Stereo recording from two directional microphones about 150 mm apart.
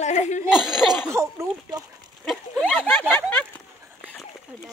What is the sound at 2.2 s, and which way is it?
Speech, 5° left (ahead or behind).